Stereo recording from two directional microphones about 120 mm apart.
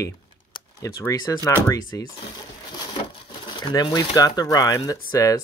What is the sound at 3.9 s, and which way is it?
Speech, 30° left (ahead or behind).